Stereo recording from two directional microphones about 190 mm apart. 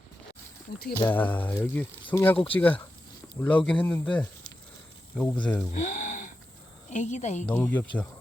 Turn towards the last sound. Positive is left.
turn(degrees=10)  # may be behind; listen again after turning